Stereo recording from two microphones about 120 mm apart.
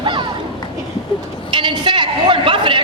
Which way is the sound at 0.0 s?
40° right (ahead or behind).